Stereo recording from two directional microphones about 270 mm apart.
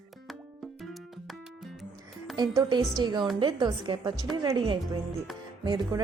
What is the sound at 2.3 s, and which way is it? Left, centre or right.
A woman's voice, centre.